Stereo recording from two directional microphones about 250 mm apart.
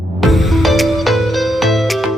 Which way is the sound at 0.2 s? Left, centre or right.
Centre.